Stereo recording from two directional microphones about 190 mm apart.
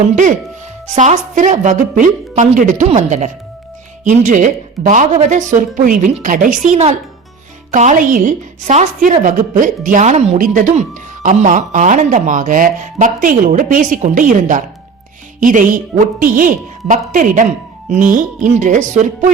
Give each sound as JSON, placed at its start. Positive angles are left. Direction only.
{"t": 0.9, "sound": "a woman's voice", "side_deg": -40}